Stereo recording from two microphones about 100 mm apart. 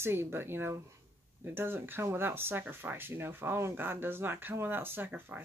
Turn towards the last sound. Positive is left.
turn(degrees=-20)  # may be behind; listen again after turning